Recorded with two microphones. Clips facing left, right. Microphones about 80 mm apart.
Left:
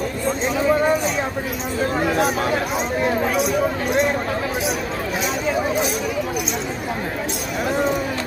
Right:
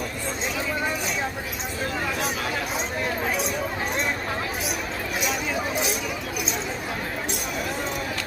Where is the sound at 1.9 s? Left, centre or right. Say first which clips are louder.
Left 9 dB; left.